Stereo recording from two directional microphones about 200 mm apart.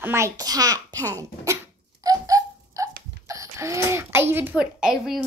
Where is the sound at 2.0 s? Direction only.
15° right (ahead or behind).